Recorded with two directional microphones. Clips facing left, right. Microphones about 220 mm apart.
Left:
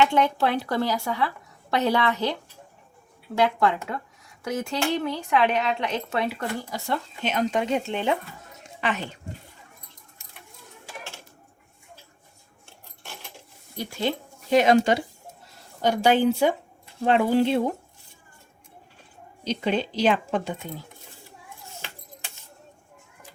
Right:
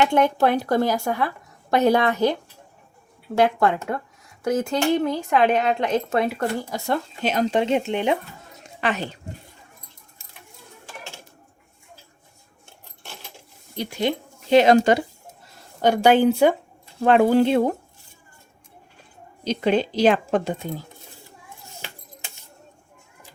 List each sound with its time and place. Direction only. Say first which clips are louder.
0.0 s speech: right 3 dB; 45° right (ahead or behind); by 8.2 s 20° right (ahead or behind)
8.8 s a woman's voice: right 3 dB; 40° right (ahead or behind)
13.7 s speech: right 3 dB; 15° right (ahead or behind)
14.5 s speech: right 4 dB; 30° right (ahead or behind)
15.8 s speech: right 4 dB; 60° right (ahead or behind)
19.7 s speech: right 5 dB; 45° right (ahead or behind)